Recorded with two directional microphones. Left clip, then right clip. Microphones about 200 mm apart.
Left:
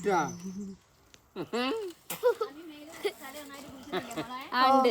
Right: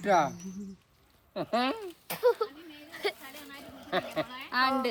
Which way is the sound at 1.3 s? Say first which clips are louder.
Right 2 dB; 10° right (ahead or behind).